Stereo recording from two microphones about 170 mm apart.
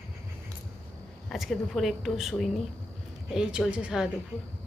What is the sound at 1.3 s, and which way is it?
Speech, centre (ahead or behind).